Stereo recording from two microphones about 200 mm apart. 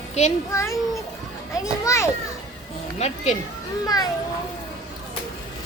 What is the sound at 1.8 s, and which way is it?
Speech, 15° left (ahead or behind).